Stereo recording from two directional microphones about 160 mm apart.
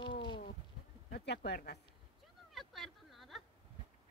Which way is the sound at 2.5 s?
Centre (ahead or behind).